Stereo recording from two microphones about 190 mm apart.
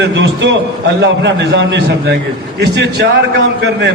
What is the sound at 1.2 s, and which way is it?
A man's voice, 65° right (ahead or behind).